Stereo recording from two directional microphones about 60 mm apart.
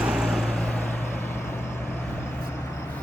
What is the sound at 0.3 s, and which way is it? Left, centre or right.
Vehicle, centre.